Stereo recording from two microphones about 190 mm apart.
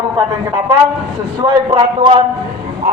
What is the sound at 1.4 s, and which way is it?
Speech, 25° right (ahead or behind).